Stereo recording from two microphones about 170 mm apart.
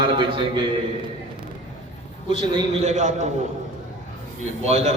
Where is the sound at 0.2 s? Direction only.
30° right (ahead or behind).